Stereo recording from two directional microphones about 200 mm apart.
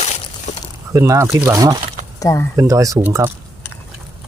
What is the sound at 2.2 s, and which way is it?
Speech, 15° left (ahead or behind).